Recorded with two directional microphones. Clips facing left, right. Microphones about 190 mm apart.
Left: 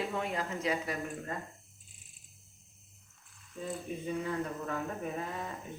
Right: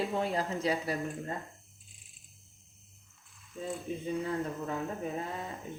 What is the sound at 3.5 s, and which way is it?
Mechanisms, centre (ahead or behind).